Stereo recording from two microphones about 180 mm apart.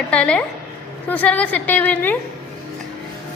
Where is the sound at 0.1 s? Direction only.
5° left (ahead or behind).